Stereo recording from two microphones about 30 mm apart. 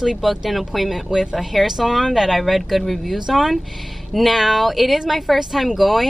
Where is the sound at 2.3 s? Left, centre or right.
Centre.